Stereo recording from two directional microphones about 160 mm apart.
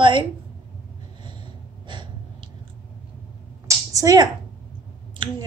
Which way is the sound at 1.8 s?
30° right (ahead or behind).